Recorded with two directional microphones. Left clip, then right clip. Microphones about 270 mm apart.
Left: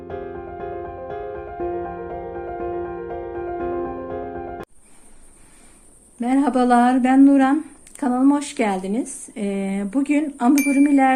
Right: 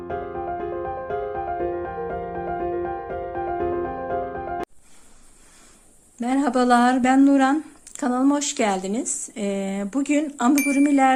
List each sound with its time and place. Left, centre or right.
0.1 s music: centre
6.1 s speech: centre